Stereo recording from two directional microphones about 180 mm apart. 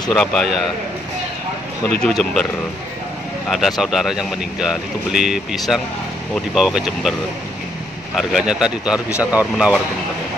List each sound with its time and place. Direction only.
0.1 s speech: 5° left (ahead or behind)
1.9 s speech: 5° left (ahead or behind)
3.4 s speech: centre (ahead or behind)
8.2 s speech: centre (ahead or behind)
9.2 s speech: 20° left (ahead or behind)